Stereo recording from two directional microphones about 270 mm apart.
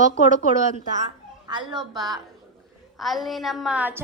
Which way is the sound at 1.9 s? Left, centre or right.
Centre.